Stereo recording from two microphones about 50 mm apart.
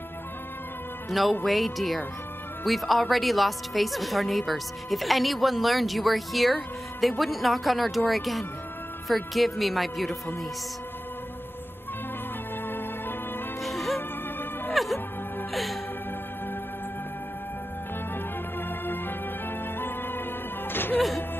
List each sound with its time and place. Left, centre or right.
1.4 s speech: centre
13.6 s music: centre
18.7 s music: left